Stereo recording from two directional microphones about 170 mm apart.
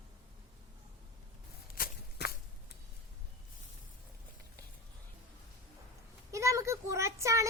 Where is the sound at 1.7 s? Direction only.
60° left (ahead or behind).